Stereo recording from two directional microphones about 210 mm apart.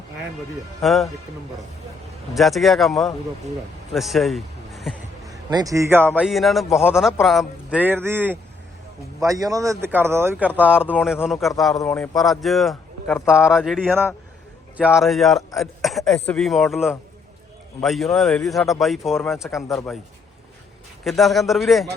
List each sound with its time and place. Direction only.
0.8 s speech: centre (ahead or behind)
2.3 s speech: centre (ahead or behind)
3.9 s a sound: centre (ahead or behind)
5.5 s speech: 15° right (ahead or behind); by 19.5 s centre (ahead or behind)
21.0 s speech: centre (ahead or behind)